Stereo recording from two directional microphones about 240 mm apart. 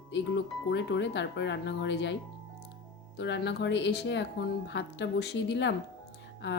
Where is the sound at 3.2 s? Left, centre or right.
Left.